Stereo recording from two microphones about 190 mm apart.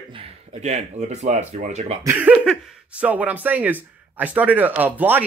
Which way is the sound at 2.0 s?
10° right (ahead or behind).